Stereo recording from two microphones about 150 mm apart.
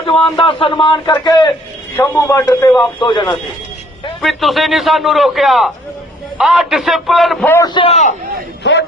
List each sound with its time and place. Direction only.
0.0 s a man's voice: 35° left (ahead or behind)
3.0 s speech: 30° left (ahead or behind)
4.2 s a man's voice: centre (ahead or behind)
7.6 s speech: 30° left (ahead or behind)